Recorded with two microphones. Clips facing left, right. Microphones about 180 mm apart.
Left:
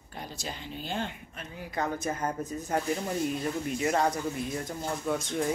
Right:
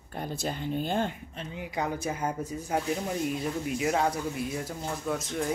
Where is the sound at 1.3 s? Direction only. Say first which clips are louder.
Right 2 dB; 25° right (ahead or behind); by 5.5 s centre (ahead or behind).